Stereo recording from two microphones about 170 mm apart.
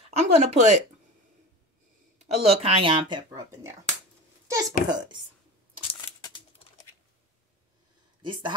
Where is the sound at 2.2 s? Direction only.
35° right (ahead or behind); by 3.7 s 20° right (ahead or behind).